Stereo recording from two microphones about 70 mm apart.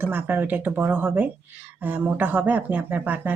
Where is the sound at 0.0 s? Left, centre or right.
Right.